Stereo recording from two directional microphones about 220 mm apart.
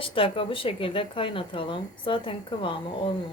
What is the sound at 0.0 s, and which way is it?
Speech, 25° left (ahead or behind).